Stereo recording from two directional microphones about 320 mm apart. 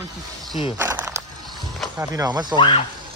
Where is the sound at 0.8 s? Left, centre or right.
Centre.